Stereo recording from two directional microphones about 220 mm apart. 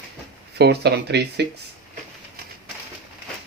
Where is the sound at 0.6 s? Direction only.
50° right (ahead or behind).